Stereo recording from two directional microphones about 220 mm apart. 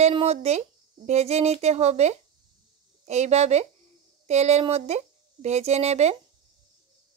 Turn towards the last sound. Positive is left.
turn(degrees=-30)  # may be behind; listen again after turning